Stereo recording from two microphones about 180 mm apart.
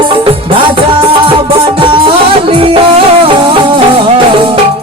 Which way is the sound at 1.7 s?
30° right (ahead or behind).